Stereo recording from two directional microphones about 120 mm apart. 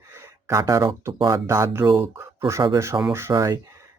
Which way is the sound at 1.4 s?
25° right (ahead or behind).